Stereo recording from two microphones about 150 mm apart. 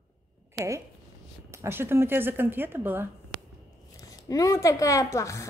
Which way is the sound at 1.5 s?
15° right (ahead or behind).